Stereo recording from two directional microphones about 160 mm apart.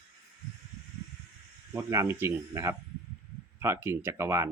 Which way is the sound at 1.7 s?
15° right (ahead or behind).